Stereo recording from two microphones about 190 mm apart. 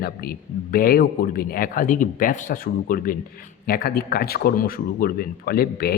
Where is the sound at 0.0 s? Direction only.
55° left (ahead or behind).